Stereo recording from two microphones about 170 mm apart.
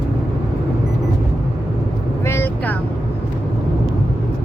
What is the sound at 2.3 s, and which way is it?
Vehicle, 10° left (ahead or behind).